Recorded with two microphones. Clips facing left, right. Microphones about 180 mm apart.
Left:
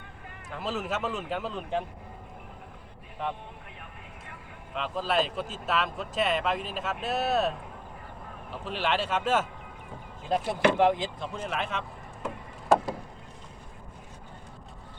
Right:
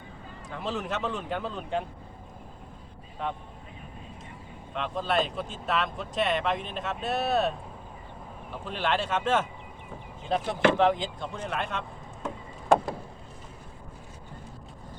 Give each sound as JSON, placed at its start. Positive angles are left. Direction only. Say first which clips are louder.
{"t": 0.5, "sound": "speech", "louder": "even", "side_deg": 5}
{"t": 4.7, "sound": "speech", "louder": "even", "side_deg": 0}
{"t": 8.6, "sound": "speech", "louder": "even", "side_deg": 5}